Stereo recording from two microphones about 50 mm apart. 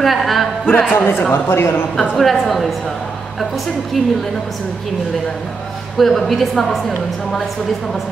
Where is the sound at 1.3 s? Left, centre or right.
Left.